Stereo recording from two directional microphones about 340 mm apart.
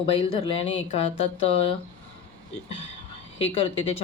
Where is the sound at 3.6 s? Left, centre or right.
Centre.